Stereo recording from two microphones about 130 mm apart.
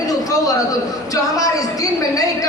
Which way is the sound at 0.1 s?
25° left (ahead or behind).